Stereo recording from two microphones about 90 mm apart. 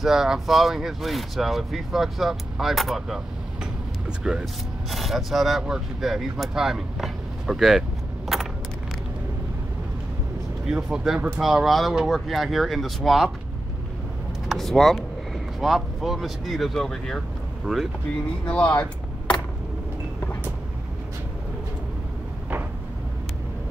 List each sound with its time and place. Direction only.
0.0 s speech: 5° right (ahead or behind)
4.2 s speech: 10° right (ahead or behind)
8.3 s vehicle: centre (ahead or behind)
10.7 s speech: 5° right (ahead or behind)
14.5 s speech: 5° left (ahead or behind)
18.4 s speech: 15° left (ahead or behind)